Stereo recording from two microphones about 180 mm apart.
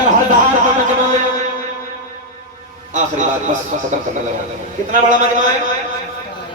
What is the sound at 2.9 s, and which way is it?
Speech, 45° right (ahead or behind).